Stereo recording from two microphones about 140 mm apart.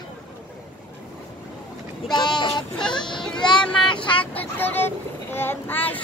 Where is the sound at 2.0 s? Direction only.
30° left (ahead or behind).